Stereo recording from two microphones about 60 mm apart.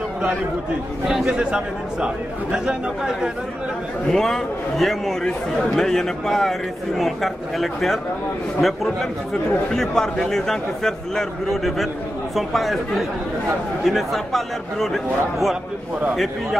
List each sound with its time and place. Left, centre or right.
1.0 s a man's voice: centre
4.1 s a man's voice: centre